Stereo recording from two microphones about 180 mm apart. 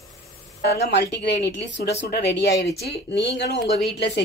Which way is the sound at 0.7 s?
65° left (ahead or behind).